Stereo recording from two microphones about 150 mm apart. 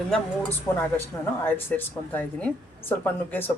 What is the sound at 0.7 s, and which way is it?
A woman's voice, 20° left (ahead or behind).